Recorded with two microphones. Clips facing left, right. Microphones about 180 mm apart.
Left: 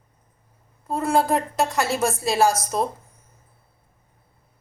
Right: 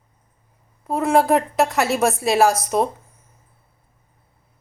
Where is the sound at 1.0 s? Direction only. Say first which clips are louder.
Right 4 dB; 75° right (ahead or behind).